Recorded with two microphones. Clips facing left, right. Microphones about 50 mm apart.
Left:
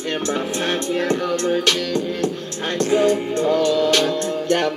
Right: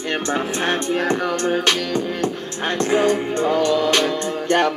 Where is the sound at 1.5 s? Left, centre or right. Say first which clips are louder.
Even; right.